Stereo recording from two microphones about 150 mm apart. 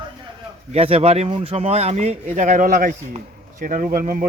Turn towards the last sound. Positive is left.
turn(degrees=-65)  # may be behind; listen again after turning